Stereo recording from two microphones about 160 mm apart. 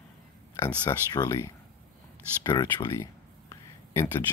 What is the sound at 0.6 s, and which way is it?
Speech, 25° left (ahead or behind).